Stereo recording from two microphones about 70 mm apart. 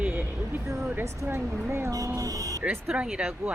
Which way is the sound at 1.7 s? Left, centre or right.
Right.